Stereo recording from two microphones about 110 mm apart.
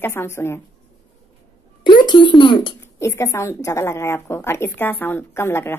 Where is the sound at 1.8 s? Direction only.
45° left (ahead or behind).